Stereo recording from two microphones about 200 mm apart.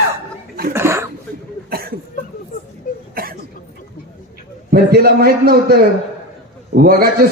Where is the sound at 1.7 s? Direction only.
50° right (ahead or behind).